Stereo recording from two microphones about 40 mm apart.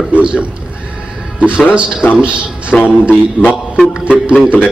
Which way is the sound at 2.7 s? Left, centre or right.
Left.